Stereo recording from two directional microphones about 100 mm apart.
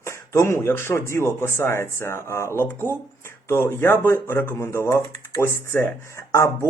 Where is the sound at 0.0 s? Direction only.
25° left (ahead or behind).